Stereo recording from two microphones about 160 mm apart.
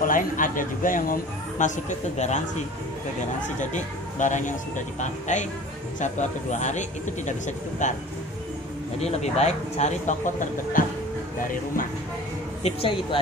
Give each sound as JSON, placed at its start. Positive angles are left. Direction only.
{"t": 0.0, "sound": "speech", "side_deg": 55}
{"t": 9.0, "sound": "speech", "side_deg": 45}
{"t": 12.6, "sound": "speech", "side_deg": 35}